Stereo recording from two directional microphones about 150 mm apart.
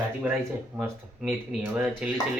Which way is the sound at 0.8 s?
10° right (ahead or behind).